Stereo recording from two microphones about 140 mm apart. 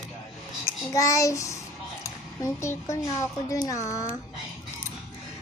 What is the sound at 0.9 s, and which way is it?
Child singing, 25° left (ahead or behind).